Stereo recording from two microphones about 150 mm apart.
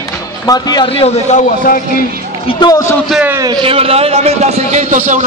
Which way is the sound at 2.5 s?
25° left (ahead or behind).